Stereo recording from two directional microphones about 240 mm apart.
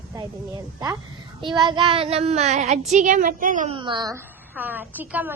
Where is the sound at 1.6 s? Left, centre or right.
Centre.